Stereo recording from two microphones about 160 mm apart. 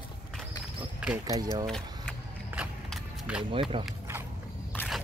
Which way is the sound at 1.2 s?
25° right (ahead or behind).